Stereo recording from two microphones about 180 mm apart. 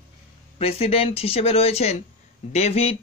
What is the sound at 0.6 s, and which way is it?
Speech, 35° left (ahead or behind).